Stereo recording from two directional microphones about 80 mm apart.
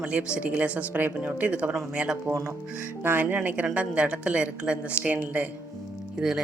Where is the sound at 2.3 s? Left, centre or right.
Right.